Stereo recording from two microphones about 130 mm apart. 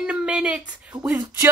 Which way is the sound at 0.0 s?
10° right (ahead or behind).